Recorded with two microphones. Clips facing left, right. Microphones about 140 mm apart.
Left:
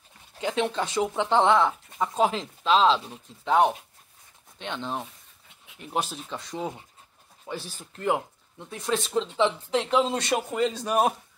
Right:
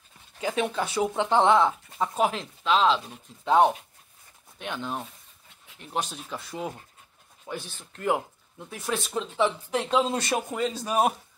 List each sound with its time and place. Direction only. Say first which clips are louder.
0.4 s speech: left 1 dB; 10° right (ahead or behind)
2.3 s speech: left 2 dB; centre (ahead or behind)
3.4 s speech: right 1 dB; 15° right (ahead or behind)
4.6 s speech: left 1 dB; 5° right (ahead or behind)
6.2 s speech: left 1 dB; 5° right (ahead or behind)